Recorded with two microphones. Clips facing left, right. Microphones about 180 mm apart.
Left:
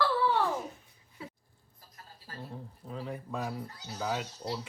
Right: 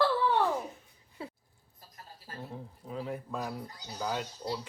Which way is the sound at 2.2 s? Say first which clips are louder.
Right 1 dB; 20° right (ahead or behind).